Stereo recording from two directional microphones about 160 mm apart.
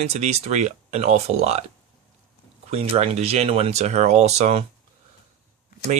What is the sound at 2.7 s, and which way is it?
Speech, 40° right (ahead or behind).